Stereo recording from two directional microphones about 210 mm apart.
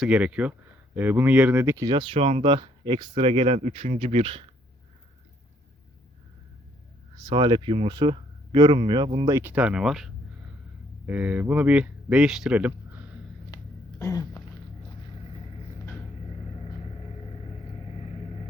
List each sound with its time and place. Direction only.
0.0 s speech: 5° right (ahead or behind); by 4.4 s 25° right (ahead or behind)
7.3 s speech: 20° right (ahead or behind)
9.3 s speech: 10° right (ahead or behind)
14.0 s throat clearing: 20° left (ahead or behind)